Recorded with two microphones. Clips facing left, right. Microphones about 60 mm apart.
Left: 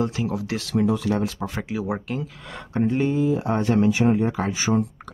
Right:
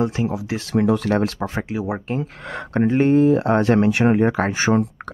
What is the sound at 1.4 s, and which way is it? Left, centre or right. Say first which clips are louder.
Speech: right 3 dB; right.